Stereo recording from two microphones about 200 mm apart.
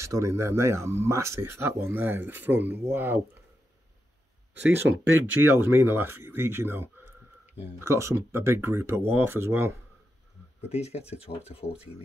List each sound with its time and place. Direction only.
0.0 s speech: 15° right (ahead or behind)
4.6 s speech: 10° right (ahead or behind)
6.3 s a sound: 10° right (ahead or behind)
7.8 s speech: 15° right (ahead or behind)
10.7 s speech: 30° left (ahead or behind)